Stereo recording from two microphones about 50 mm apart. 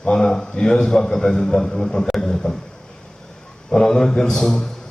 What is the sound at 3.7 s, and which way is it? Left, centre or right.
A man's voice, centre.